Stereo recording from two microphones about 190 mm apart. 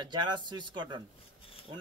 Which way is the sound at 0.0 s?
25° right (ahead or behind).